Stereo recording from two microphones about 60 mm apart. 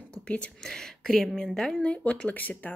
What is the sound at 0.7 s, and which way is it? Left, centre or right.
Speech, centre.